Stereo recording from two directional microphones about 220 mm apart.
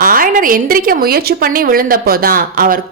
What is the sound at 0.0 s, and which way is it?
A woman's voice, 40° right (ahead or behind).